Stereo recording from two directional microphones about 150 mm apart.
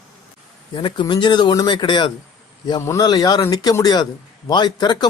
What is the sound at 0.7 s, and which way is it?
Speech, 35° left (ahead or behind).